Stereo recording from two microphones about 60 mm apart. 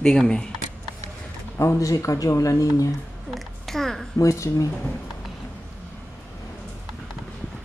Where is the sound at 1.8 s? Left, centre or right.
Left.